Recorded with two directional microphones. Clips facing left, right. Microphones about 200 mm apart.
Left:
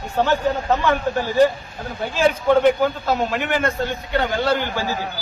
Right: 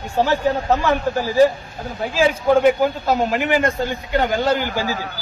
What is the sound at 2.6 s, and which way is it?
A man's voice, 10° right (ahead or behind).